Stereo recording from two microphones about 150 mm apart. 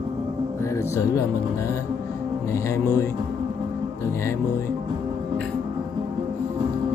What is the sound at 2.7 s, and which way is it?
Mantra, 20° left (ahead or behind).